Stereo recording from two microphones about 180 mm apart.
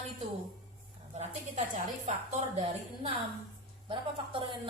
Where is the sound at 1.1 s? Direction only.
35° right (ahead or behind).